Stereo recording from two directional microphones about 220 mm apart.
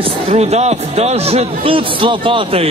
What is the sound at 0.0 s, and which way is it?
A man's voice, 30° right (ahead or behind).